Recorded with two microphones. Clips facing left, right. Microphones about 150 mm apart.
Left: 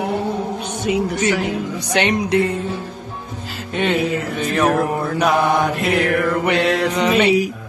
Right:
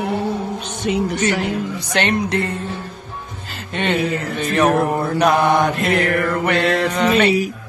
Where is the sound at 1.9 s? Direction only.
10° left (ahead or behind).